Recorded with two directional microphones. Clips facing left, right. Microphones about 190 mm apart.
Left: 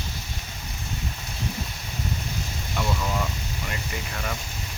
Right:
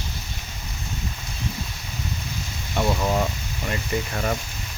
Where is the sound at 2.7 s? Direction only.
40° right (ahead or behind).